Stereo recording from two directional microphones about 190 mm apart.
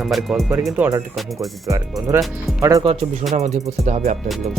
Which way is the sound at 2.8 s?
30° right (ahead or behind).